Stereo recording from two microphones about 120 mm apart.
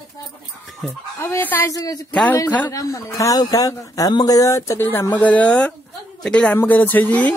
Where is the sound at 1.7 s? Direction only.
30° left (ahead or behind).